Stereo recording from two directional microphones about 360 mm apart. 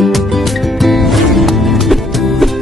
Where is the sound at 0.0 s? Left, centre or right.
Centre.